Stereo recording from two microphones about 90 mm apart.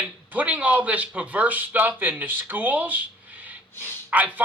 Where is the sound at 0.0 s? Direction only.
20° right (ahead or behind).